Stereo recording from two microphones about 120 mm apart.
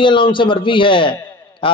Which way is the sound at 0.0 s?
45° left (ahead or behind).